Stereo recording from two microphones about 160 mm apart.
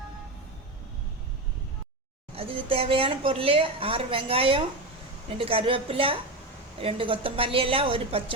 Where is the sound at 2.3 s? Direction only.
35° right (ahead or behind).